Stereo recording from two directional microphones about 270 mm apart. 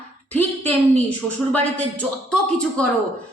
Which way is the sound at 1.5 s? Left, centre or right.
Centre.